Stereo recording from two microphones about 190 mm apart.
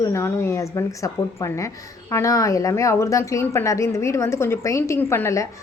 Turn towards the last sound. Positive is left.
turn(degrees=15)  # may be behind; listen again after turning